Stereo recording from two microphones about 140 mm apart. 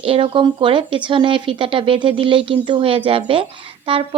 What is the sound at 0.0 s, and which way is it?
Speech, 40° right (ahead or behind).